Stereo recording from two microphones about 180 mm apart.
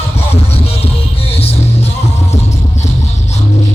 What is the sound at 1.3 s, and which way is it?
Music, 35° left (ahead or behind).